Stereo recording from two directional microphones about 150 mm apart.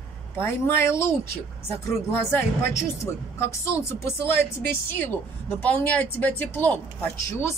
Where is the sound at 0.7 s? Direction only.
15° left (ahead or behind).